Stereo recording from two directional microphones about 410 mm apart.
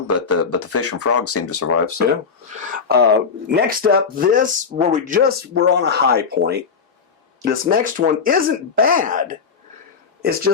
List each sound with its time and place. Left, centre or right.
0.3 s speech: left
2.6 s speech: right